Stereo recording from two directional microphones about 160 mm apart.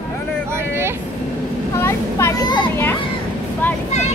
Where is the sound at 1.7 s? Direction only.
15° left (ahead or behind).